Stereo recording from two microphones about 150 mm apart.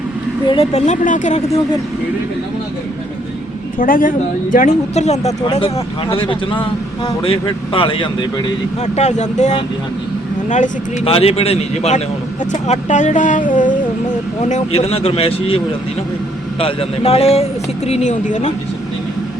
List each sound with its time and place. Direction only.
0.4 s speech: 35° left (ahead or behind); by 1.4 s 55° left (ahead or behind)
3.8 s a woman's voice: 70° left (ahead or behind)
4.5 s speech: 50° left (ahead or behind); by 8.5 s 35° left (ahead or behind)
8.8 s speech: 50° left (ahead or behind)
11.0 s speech: 40° left (ahead or behind); by 13.7 s 60° left (ahead or behind)
14.4 s speech: 45° left (ahead or behind)